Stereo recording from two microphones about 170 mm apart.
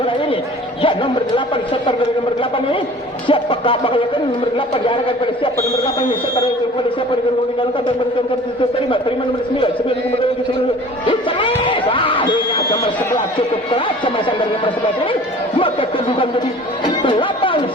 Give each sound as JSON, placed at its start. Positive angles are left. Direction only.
{"t": 1.9, "sound": "speech", "side_deg": 30}
{"t": 11.0, "sound": "music", "side_deg": 30}
{"t": 13.7, "sound": "speech", "side_deg": 30}
{"t": 15.5, "sound": "a sound", "side_deg": 30}
{"t": 17.0, "sound": "music", "side_deg": 30}